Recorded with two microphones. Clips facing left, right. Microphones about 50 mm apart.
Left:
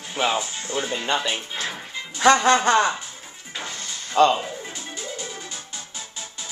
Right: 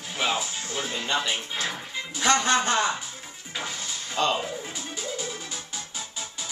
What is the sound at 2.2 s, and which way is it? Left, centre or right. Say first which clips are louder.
Speech: left 7 dB; left.